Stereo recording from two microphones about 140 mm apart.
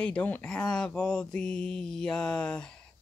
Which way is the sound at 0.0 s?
10° left (ahead or behind).